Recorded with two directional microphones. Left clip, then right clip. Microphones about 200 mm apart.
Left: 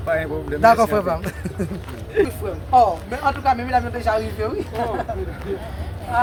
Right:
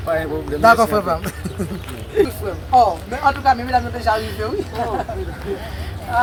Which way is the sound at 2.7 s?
10° left (ahead or behind).